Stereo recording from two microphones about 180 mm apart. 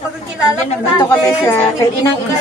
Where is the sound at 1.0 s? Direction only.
15° left (ahead or behind).